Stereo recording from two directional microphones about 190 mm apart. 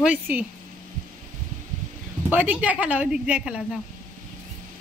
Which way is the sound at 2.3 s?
5° right (ahead or behind).